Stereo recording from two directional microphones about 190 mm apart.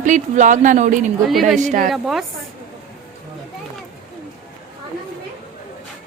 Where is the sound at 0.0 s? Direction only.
40° right (ahead or behind).